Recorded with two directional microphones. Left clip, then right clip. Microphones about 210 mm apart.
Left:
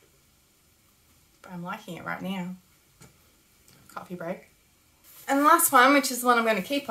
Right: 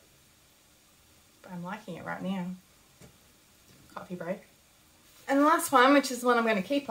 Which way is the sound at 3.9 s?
5° left (ahead or behind).